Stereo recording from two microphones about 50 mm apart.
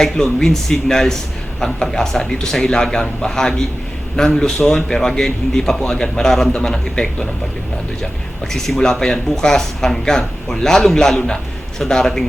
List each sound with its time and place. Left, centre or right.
0.0 s speech: centre
8.5 s speech: centre